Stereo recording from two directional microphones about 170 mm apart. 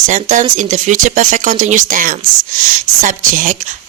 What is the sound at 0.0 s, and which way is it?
A woman's voice, 50° right (ahead or behind).